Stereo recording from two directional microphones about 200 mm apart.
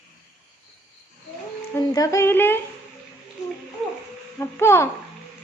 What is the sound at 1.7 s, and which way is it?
Speech, 15° left (ahead or behind).